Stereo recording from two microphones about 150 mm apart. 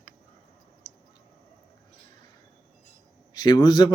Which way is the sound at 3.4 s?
30° left (ahead or behind).